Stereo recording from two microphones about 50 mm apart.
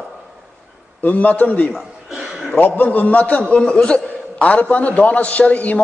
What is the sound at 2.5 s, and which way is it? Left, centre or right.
Speech, left.